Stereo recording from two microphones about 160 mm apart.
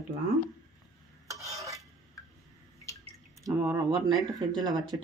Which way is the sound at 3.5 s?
25° right (ahead or behind).